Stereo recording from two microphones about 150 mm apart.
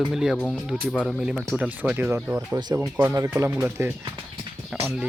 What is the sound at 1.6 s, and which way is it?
Speech, 10° right (ahead or behind).